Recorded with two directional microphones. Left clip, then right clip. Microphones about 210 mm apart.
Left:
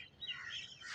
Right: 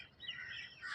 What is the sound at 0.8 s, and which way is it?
Bird, 5° right (ahead or behind).